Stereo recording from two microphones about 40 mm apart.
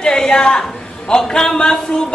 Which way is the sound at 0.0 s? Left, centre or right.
Centre.